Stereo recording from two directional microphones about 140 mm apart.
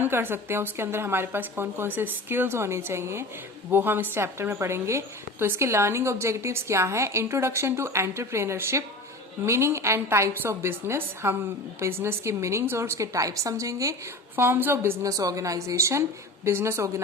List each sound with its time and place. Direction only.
0.0 s a woman's voice: 15° right (ahead or behind)